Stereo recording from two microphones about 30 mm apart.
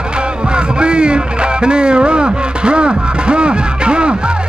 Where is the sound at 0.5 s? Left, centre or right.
Right.